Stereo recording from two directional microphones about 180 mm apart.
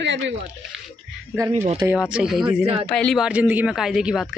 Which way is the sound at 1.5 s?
35° right (ahead or behind).